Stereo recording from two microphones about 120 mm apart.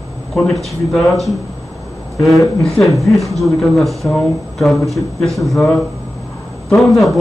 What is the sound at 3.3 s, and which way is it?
Speech, centre (ahead or behind).